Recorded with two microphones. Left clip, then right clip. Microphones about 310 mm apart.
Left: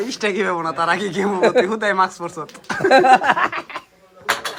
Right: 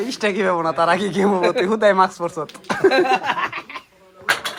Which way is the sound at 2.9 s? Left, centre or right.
Left.